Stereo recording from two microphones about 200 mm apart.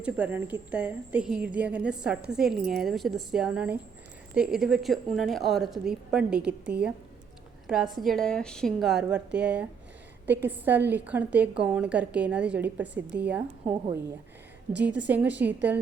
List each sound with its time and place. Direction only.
0.0 s a woman's voice: 10° right (ahead or behind)